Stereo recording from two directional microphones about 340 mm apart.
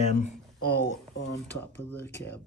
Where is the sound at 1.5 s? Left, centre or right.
Centre.